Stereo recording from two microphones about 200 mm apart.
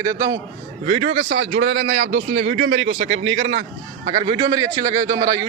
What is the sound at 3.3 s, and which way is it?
Speech, 70° right (ahead or behind).